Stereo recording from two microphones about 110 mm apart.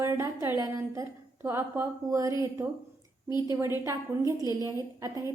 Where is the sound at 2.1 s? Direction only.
30° right (ahead or behind).